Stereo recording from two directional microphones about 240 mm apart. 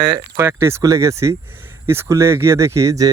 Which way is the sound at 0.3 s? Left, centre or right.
Centre.